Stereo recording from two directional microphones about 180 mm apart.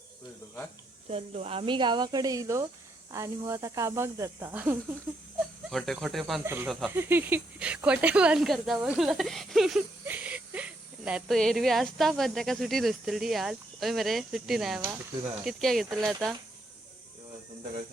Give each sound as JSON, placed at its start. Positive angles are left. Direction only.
{"t": 1.0, "sound": "speech", "side_deg": -35}
{"t": 5.7, "sound": "speech", "side_deg": 0}
{"t": 6.4, "sound": "speech", "side_deg": -15}
{"t": 6.7, "sound": "speech", "side_deg": 0}
{"t": 6.9, "sound": "speech", "side_deg": -10}